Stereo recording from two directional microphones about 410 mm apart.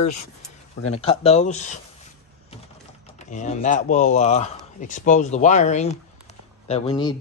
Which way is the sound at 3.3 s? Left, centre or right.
Centre.